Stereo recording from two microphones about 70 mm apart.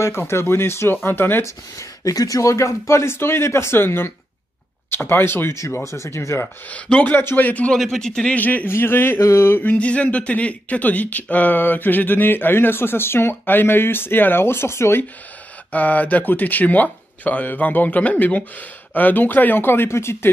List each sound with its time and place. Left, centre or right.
0.0 s speech: left
1.4 s speech: left
6.7 s speech: centre
7.2 s speech: left
7.7 s speech: centre
8.4 s speech: left
9.6 s speech: left
15.7 s speech: left